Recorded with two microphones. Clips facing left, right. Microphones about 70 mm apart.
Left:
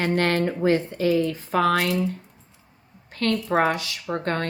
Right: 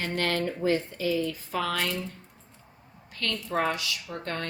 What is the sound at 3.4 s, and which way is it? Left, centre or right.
Speech, left.